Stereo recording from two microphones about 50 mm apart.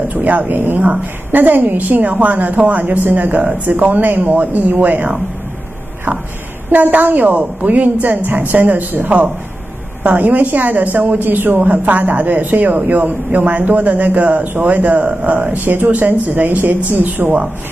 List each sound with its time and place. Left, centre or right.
0.1 s speech: right